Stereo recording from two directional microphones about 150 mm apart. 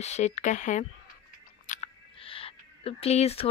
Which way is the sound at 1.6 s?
40° left (ahead or behind).